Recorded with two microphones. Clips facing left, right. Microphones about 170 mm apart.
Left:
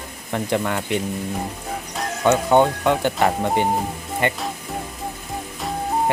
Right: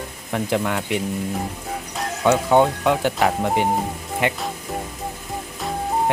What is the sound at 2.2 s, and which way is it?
Speech, centre (ahead or behind).